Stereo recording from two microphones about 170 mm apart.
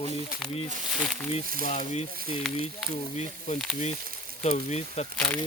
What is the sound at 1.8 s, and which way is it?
Speech, 40° left (ahead or behind).